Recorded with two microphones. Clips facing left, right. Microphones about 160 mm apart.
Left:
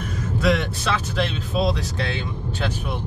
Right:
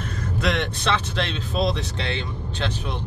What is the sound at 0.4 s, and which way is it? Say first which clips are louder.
Speech: left 3 dB; 5° left (ahead or behind).